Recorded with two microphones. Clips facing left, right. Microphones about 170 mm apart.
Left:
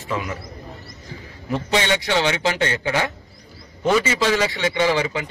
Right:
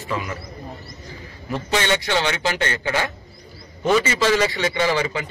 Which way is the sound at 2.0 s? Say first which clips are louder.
Left 1 dB; centre (ahead or behind).